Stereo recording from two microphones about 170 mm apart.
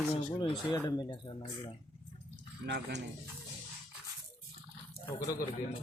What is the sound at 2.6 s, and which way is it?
Speech, 85° right.